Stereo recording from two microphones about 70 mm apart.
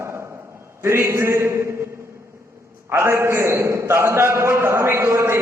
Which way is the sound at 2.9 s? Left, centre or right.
Right.